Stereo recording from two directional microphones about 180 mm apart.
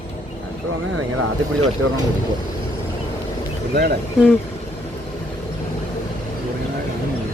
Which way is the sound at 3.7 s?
60° right (ahead or behind).